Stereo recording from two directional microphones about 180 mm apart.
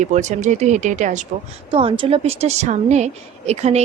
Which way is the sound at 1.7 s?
30° right (ahead or behind).